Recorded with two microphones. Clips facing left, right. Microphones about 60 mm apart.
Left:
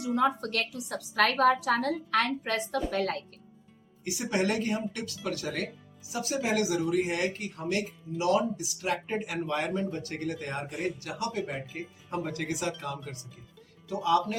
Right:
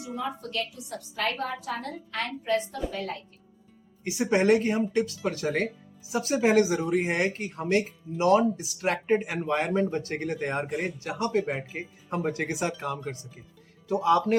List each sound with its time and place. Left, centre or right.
0.0 s a woman's voice: left
1.1 s a woman's voice: left
2.9 s a woman's voice: left
4.0 s speech: right